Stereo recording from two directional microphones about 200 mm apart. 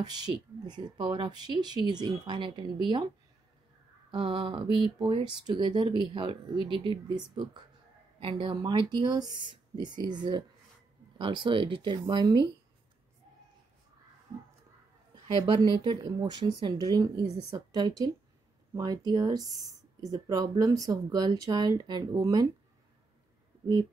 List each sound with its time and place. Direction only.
0.0 s speech: 20° right (ahead or behind)
4.1 s speech: 25° right (ahead or behind)
8.2 s speech: 25° right (ahead or behind)
15.3 s speech: 25° right (ahead or behind)